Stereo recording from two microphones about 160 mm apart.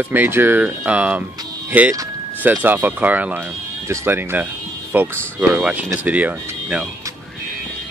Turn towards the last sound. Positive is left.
turn(degrees=-10)  # may be behind; listen again after turning